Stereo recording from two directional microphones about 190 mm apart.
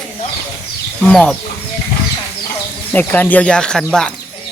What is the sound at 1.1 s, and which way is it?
Speech, 5° left (ahead or behind).